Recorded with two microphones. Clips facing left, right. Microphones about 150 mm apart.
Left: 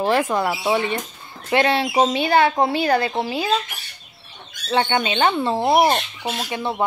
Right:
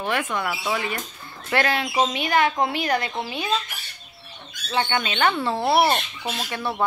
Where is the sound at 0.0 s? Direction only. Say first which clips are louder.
Left 6 dB; 35° left (ahead or behind).